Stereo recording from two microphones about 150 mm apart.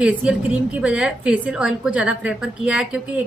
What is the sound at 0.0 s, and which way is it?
A woman's voice, 5° right (ahead or behind).